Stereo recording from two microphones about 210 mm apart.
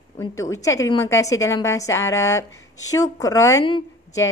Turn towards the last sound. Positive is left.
turn(degrees=20)  # may be behind; listen again after turning